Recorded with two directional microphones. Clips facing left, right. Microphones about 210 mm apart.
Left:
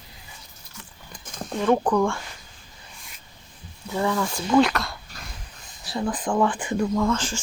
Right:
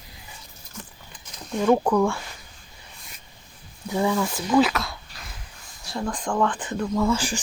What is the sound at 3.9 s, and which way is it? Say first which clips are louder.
Speech: right 1 dB; 15° right (ahead or behind).